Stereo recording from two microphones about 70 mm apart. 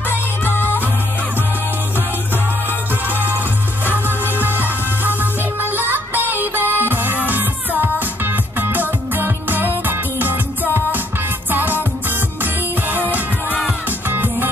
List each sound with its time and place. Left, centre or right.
0.1 s music: left
3.1 s music: right
13.8 s music: right